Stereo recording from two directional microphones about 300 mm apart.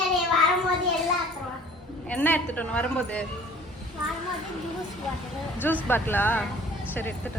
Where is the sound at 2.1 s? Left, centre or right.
Centre.